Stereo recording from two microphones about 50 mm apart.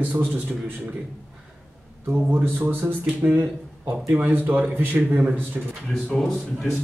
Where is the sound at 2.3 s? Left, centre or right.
Right.